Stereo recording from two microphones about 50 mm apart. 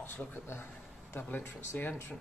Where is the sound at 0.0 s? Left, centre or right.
Left.